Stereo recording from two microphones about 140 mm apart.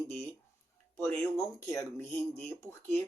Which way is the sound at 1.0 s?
20° left (ahead or behind).